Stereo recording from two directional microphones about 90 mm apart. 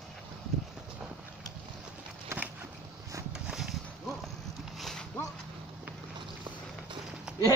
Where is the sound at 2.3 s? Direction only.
30° right (ahead or behind).